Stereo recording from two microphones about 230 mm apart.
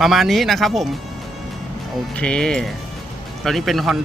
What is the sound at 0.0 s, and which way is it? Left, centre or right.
Speech, centre.